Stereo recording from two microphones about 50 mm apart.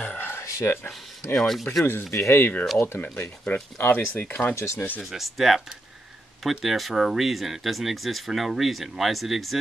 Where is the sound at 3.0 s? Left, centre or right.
Left.